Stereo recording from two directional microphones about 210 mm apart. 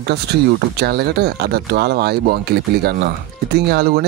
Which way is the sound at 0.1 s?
50° right (ahead or behind).